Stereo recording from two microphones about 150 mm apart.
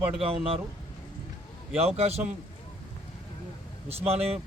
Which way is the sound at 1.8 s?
45° right (ahead or behind).